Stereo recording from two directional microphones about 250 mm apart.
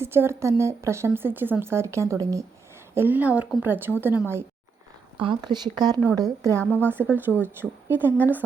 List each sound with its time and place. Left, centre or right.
0.0 s speech: centre
6.6 s speech: centre
6.9 s speech: centre